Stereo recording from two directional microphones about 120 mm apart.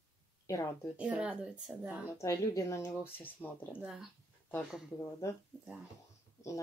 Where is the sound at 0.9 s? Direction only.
10° right (ahead or behind).